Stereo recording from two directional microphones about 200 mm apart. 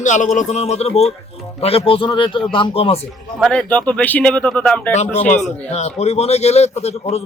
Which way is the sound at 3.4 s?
5° left (ahead or behind).